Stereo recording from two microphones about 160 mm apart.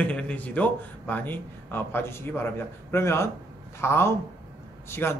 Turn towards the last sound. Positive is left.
turn(degrees=15)  # may be behind; listen again after turning